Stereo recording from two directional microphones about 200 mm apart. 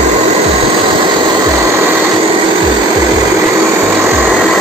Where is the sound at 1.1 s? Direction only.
15° right (ahead or behind).